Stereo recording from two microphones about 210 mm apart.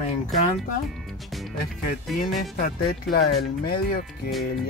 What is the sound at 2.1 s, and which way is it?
Speech, centre (ahead or behind).